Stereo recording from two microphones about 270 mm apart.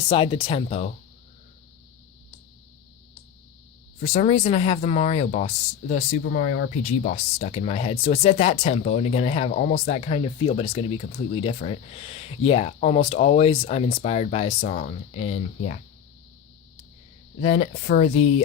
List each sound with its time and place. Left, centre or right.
0.1 s speech: centre
4.0 s speech: left
17.4 s speech: left